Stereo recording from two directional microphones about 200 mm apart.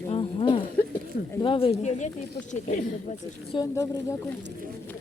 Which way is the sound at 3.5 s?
20° left (ahead or behind).